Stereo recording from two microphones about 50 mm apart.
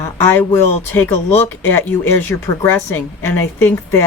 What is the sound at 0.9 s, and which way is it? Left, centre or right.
A woman's voice, left.